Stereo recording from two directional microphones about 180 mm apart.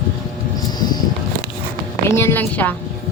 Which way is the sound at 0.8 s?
25° left (ahead or behind).